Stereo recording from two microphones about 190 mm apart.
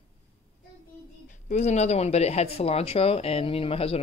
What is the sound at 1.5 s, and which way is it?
Speech, 35° left (ahead or behind).